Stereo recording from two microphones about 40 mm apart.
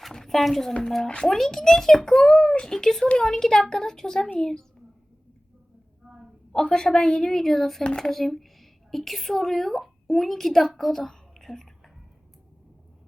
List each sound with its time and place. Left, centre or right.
0.1 s a sound: centre
0.8 s a woman's voice: centre
1.0 s speech: left
1.3 s a woman's voice: centre
2.2 s a woman's voice: left
6.5 s a woman's voice: centre
7.9 s speech: centre
8.1 s a woman's voice: centre